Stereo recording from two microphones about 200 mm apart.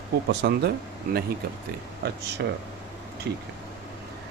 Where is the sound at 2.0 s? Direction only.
55° right (ahead or behind).